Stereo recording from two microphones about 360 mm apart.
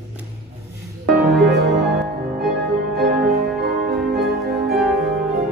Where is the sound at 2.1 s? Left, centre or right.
Right.